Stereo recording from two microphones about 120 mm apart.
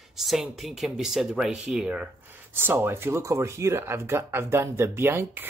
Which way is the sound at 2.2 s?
15° right (ahead or behind).